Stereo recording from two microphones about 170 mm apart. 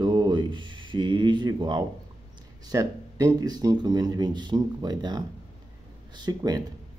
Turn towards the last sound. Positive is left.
turn(degrees=-25)  # may be behind; listen again after turning